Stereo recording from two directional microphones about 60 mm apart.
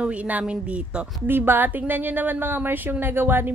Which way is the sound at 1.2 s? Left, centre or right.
Right.